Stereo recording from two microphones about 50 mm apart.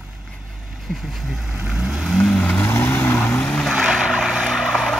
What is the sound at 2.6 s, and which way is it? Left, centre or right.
Vehicle, left.